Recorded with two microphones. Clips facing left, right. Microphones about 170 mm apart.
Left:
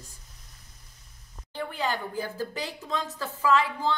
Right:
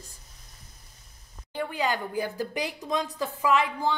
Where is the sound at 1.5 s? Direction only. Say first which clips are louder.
Right 2 dB; 15° right (ahead or behind).